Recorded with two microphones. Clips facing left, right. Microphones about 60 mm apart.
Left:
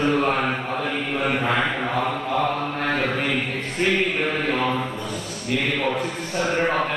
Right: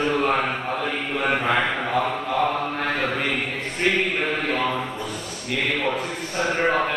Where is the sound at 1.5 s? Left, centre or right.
Centre.